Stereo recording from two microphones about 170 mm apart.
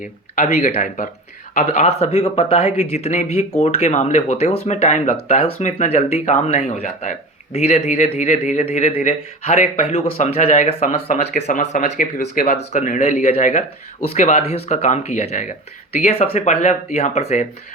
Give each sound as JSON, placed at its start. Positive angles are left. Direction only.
{"t": 0.0, "sound": "speech", "side_deg": 45}